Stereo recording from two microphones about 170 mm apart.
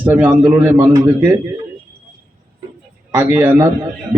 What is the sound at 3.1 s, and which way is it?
Speech, 10° right (ahead or behind).